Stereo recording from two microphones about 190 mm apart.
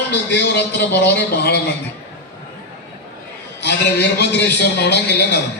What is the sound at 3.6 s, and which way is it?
A man's voice, 60° left (ahead or behind).